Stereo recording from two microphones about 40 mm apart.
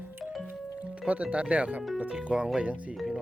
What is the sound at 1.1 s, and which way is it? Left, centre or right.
Speech, right.